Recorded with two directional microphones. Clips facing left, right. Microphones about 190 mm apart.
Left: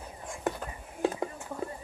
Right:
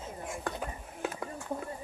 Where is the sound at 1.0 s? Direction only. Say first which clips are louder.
Left 7 dB; 25° left (ahead or behind).